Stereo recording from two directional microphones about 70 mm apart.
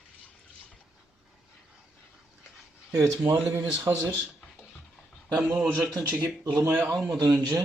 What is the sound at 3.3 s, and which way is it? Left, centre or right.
Speech, right.